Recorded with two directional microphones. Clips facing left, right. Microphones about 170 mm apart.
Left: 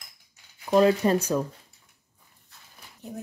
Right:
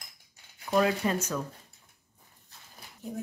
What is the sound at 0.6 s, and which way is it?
Speech, 35° left (ahead or behind).